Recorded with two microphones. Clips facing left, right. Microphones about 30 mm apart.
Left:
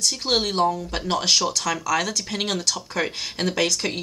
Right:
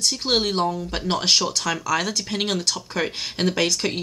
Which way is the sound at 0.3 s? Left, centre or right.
Centre.